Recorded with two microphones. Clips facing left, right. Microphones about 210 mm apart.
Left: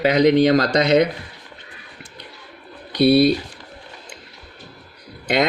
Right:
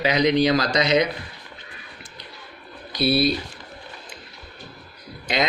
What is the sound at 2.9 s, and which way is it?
Speech, 65° left (ahead or behind).